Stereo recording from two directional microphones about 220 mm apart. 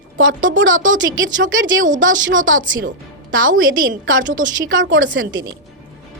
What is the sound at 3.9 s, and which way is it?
Speech, 60° right (ahead or behind).